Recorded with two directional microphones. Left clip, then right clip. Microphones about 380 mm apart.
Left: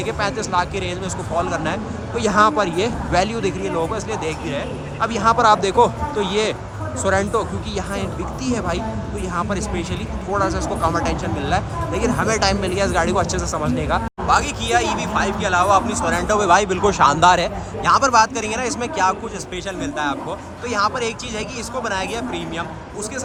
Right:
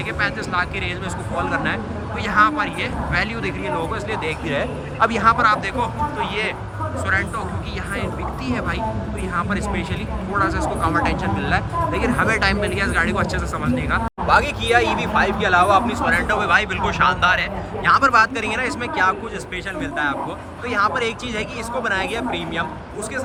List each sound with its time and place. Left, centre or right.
0.2 s speech: centre
8.4 s speech: centre